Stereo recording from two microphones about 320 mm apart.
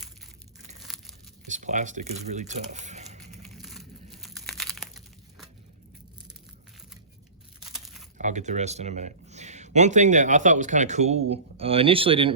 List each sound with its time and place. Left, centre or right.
0.8 s tearing: centre
1.5 s speech: right
3.5 s crumpling: centre
7.7 s crumpling: centre
8.2 s speech: right